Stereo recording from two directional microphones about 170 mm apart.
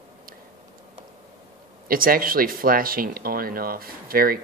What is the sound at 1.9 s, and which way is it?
Speech, 60° right (ahead or behind).